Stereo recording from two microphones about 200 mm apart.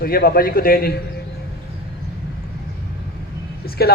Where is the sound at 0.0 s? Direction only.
50° left (ahead or behind).